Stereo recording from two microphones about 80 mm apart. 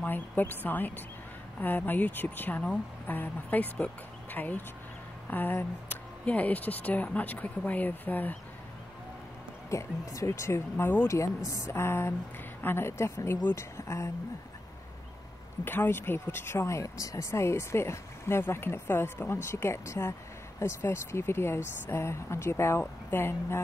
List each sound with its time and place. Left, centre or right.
0.0 s speech: left
9.7 s speech: left
11.1 s speech: left
15.6 s speech: left